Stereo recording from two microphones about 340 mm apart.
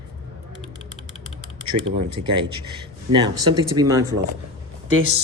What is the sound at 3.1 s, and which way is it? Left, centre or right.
Speech, centre.